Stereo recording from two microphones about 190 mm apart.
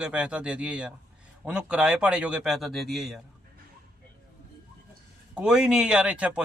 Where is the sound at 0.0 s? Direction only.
5° right (ahead or behind).